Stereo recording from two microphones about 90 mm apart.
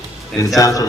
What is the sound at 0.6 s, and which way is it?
Speech, 40° left (ahead or behind).